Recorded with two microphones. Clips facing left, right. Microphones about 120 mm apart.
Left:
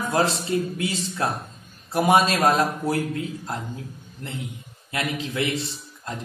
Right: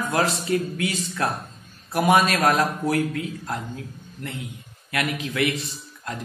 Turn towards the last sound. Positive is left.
turn(degrees=25)  # may be behind; listen again after turning